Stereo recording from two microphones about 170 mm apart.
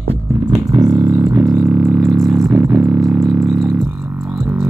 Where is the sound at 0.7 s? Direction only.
20° right (ahead or behind).